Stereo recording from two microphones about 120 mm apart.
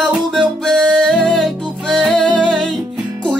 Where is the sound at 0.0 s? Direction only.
5° left (ahead or behind).